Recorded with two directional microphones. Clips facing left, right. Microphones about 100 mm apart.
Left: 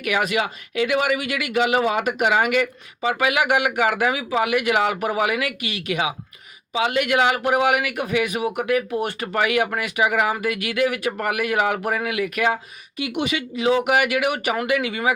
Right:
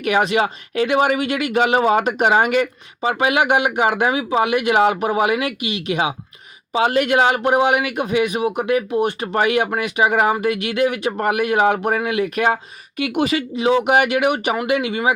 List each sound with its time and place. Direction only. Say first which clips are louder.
0.0 s speech: right 5 dB; 30° right (ahead or behind)
6.7 s speech: right 4 dB; 35° right (ahead or behind)
13.0 s speech: right 5 dB; 40° right (ahead or behind)
13.6 s speech: right 3 dB; 25° right (ahead or behind)